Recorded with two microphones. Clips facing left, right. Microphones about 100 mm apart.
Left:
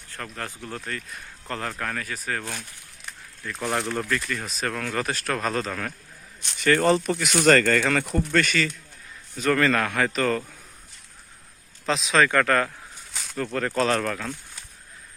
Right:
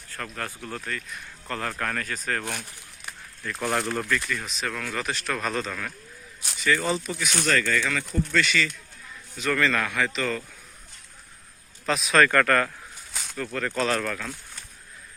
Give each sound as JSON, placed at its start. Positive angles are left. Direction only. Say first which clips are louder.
{"t": 0.1, "sound": "speech", "louder": "even", "side_deg": 25}
{"t": 1.8, "sound": "speech", "louder": "right 1 dB", "side_deg": 10}
{"t": 2.4, "sound": "speech", "louder": "right 2 dB", "side_deg": -15}
{"t": 3.5, "sound": "speech", "louder": "even", "side_deg": 0}
{"t": 4.3, "sound": "speech", "louder": "left 2 dB", "side_deg": 40}
{"t": 6.6, "sound": "speech", "louder": "left 5 dB", "side_deg": 55}
{"t": 7.4, "sound": "speech", "louder": "left 7 dB", "side_deg": 65}
{"t": 11.9, "sound": "speech", "louder": "left 1 dB", "side_deg": 30}
{"t": 12.1, "sound": "speech", "louder": "right 1 dB", "side_deg": 15}
{"t": 13.3, "sound": "speech", "louder": "left 3 dB", "side_deg": 35}